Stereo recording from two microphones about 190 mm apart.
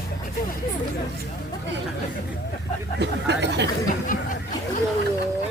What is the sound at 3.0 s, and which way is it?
Speech, 65° right (ahead or behind).